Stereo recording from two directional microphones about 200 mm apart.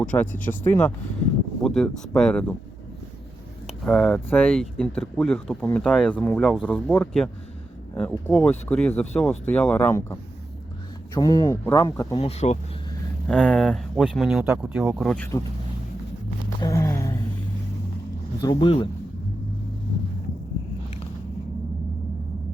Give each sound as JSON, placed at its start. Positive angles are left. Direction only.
{"t": 0.0, "sound": "speech", "side_deg": 5}
{"t": 3.7, "sound": "speech", "side_deg": 0}
{"t": 12.1, "sound": "speech", "side_deg": 30}
{"t": 13.2, "sound": "speech", "side_deg": 5}
{"t": 15.1, "sound": "speech", "side_deg": 10}
{"t": 16.6, "sound": "speech", "side_deg": 15}
{"t": 18.4, "sound": "speech", "side_deg": 25}